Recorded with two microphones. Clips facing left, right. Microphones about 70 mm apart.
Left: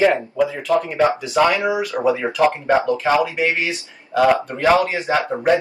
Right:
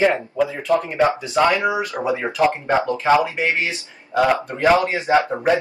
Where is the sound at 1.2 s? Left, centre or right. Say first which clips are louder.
Left 1 dB; right.